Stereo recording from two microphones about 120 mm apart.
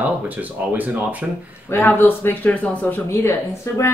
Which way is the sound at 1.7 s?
20° left (ahead or behind).